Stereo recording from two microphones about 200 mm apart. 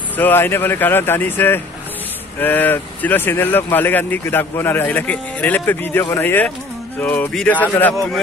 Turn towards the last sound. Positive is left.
turn(degrees=10)  # may be behind; listen again after turning